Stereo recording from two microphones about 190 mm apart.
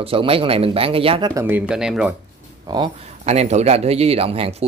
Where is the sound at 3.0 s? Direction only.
35° right (ahead or behind).